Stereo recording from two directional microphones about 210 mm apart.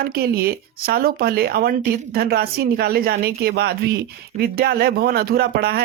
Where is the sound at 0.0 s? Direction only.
45° right (ahead or behind).